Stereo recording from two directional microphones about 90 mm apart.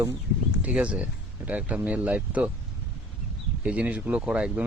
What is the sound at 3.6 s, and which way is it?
Speech, 15° right (ahead or behind).